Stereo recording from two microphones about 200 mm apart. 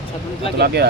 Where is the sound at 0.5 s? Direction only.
55° right (ahead or behind).